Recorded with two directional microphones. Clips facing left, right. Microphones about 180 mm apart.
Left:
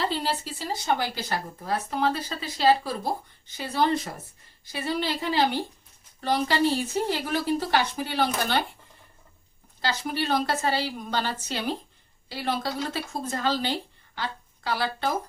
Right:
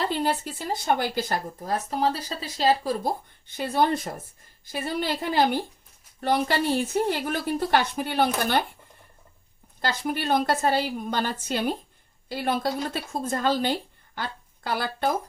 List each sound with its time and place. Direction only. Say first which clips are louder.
0.0 s speech: right 2 dB; 50° right (ahead or behind)
3.4 s speech: right 2 dB; 55° right (ahead or behind)
9.8 s speech: right 1 dB; 50° right (ahead or behind)